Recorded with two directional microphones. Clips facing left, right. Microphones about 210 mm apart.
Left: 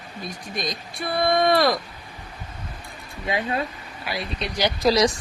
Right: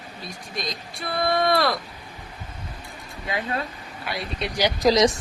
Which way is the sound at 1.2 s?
15° left (ahead or behind).